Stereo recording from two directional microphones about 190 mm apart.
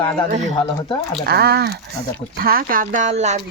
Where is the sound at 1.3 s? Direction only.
55° right (ahead or behind).